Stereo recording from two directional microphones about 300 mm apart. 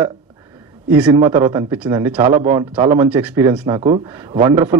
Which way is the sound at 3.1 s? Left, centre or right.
Centre.